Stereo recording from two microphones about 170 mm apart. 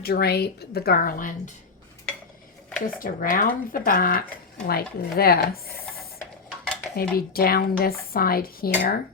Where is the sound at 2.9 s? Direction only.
55° left (ahead or behind).